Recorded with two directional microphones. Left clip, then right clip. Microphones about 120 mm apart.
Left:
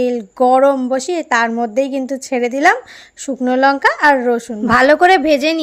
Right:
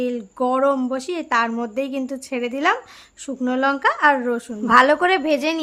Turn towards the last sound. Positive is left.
turn(degrees=35)  # may be behind; listen again after turning